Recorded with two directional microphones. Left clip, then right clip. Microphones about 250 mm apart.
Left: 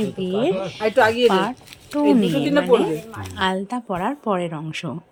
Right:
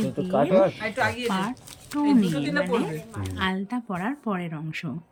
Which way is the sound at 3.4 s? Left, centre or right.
Centre.